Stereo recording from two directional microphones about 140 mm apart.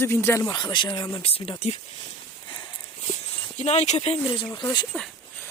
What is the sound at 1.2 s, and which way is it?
Speech, 40° left (ahead or behind).